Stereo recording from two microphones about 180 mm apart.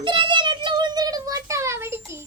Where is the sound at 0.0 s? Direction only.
25° right (ahead or behind).